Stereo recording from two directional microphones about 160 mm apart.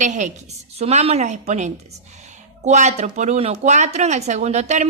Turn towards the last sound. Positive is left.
turn(degrees=-45)  # may be behind; listen again after turning